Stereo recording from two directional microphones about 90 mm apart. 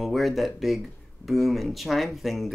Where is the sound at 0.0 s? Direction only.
Centre (ahead or behind).